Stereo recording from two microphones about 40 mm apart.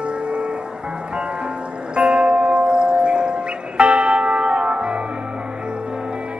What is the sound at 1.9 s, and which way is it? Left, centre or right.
Music, right.